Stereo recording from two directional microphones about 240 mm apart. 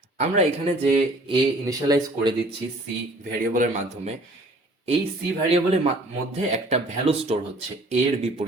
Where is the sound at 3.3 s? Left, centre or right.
Right.